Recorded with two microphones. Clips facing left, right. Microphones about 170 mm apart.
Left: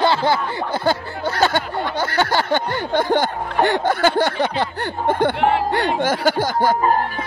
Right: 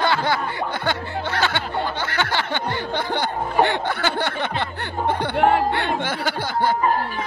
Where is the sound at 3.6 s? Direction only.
45° left (ahead or behind).